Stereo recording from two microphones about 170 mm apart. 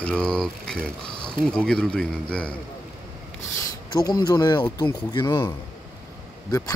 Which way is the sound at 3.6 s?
25° left (ahead or behind).